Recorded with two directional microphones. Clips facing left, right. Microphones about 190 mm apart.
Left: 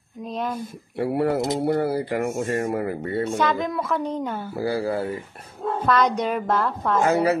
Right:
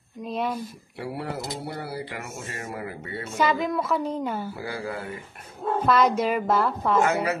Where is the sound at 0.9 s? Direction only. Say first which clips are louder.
Left 10 dB; 55° left (ahead or behind); by 3.3 s 40° left (ahead or behind).